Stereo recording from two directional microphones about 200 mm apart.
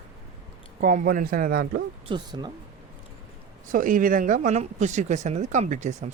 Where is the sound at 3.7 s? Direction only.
40° right (ahead or behind).